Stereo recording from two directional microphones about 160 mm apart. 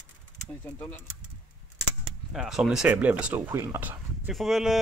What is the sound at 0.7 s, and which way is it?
Speech, 15° left (ahead or behind).